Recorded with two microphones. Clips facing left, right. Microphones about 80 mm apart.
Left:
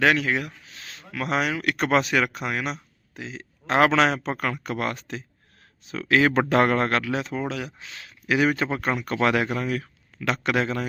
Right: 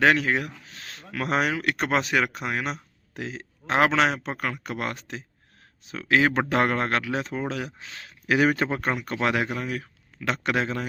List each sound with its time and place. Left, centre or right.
0.0 s speech: right
0.7 s speech: right
3.2 s speech: right
3.7 s speech: right
7.1 s speech: right
8.9 s speech: right